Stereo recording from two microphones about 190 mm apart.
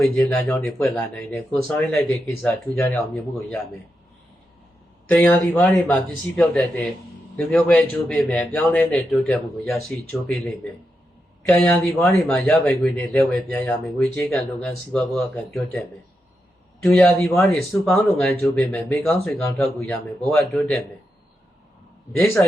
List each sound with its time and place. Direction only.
0.0 s speech: 5° left (ahead or behind)
5.0 s speech: 10° left (ahead or behind)
16.8 s speech: 5° left (ahead or behind)